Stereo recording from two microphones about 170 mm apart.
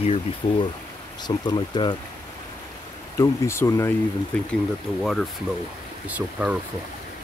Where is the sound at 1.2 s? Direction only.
25° left (ahead or behind).